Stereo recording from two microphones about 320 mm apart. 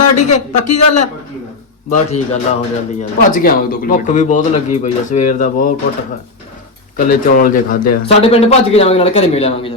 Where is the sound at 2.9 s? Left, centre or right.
Left.